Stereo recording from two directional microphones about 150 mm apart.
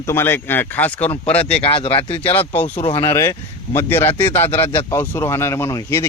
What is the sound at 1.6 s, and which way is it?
Speech, 35° left (ahead or behind).